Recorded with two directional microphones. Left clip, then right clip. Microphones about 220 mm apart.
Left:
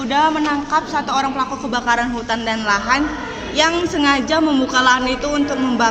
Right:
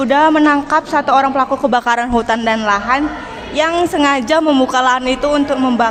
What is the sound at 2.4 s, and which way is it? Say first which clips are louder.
A woman's voice: right 3 dB; 25° right (ahead or behind).